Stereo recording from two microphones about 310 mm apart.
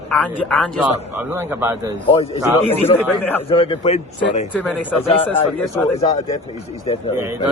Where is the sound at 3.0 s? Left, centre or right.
Centre.